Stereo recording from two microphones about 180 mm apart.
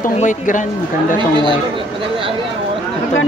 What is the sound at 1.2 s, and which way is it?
Speech, 25° right (ahead or behind).